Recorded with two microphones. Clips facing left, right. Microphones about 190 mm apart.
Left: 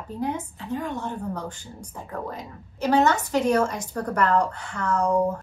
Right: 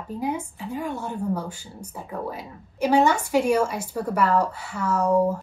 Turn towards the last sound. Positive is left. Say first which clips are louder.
# right 2 dB
turn(degrees=-5)  # may be behind; listen again after turning